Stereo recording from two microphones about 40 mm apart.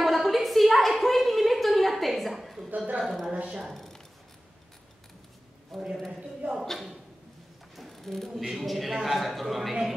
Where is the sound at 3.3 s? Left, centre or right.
Right.